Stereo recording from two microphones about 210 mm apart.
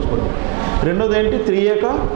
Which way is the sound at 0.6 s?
20° right (ahead or behind).